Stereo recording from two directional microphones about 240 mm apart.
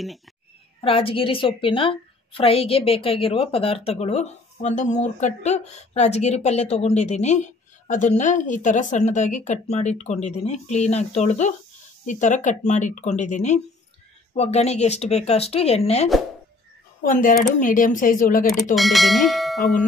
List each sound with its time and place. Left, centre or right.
0.7 s a woman's voice: left
18.8 s speech: centre